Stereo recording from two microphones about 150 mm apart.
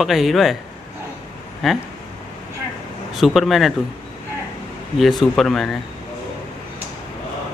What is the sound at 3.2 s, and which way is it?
Speech, centre (ahead or behind).